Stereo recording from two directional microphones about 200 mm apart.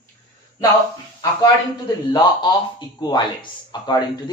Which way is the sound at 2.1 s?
20° left (ahead or behind).